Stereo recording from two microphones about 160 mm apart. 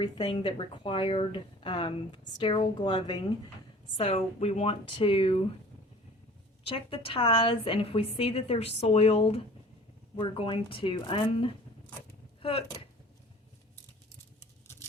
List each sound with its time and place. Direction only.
0.0 s a woman's voice: 25° left (ahead or behind)
6.7 s a woman's voice: 35° left (ahead or behind)